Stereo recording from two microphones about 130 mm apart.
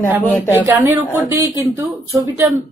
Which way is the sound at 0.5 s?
20° right (ahead or behind).